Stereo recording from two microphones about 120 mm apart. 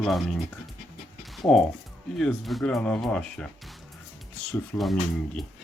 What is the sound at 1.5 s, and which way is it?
Speech, 5° left (ahead or behind).